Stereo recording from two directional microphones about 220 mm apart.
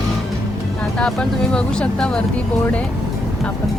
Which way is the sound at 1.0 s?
5° left (ahead or behind).